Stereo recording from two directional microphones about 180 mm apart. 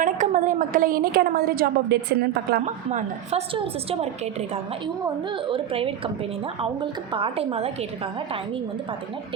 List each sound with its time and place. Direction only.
0.0 s a woman's voice: 45° right (ahead or behind); by 2.6 s 65° right (ahead or behind)
2.6 s a woman's voice: 40° right (ahead or behind)
7.1 s a woman's voice: 30° right (ahead or behind)